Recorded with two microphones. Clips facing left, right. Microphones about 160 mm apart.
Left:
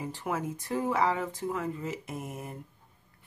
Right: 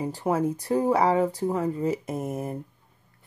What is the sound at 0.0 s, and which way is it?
Speech, 35° right (ahead or behind).